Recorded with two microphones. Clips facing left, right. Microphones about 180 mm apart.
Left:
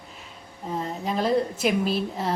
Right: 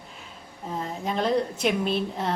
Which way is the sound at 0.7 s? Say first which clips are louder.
Left 2 dB; centre (ahead or behind).